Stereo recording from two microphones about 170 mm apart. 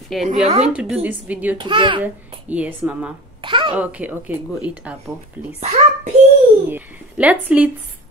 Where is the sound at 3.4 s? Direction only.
30° right (ahead or behind).